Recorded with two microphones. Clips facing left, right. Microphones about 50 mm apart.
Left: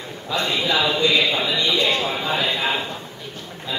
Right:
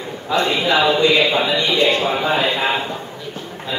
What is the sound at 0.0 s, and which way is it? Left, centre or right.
A man's voice, centre.